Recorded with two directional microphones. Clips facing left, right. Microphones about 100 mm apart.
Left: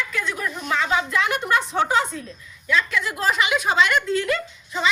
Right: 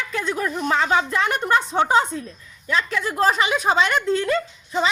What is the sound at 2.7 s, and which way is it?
A woman's voice, 35° right (ahead or behind).